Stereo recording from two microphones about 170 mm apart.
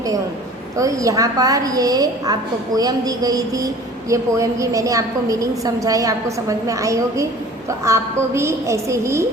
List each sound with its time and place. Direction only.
0.8 s a woman's voice: 20° right (ahead or behind)